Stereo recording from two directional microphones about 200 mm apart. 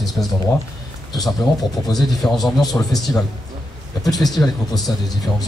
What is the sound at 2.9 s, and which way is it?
Speech, 15° left (ahead or behind).